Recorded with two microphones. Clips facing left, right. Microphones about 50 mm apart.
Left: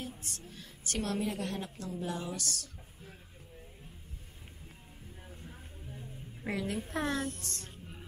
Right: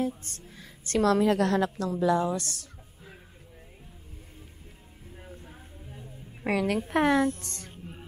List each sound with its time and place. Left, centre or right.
0.0 s speech: right
0.9 s a woman's voice: right
2.1 s a woman's voice: right
2.6 s a sound: right
5.1 s a sound: right
6.4 s a woman's voice: right
6.9 s a woman's voice: right